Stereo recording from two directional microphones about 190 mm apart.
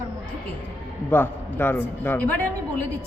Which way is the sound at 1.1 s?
10° left (ahead or behind).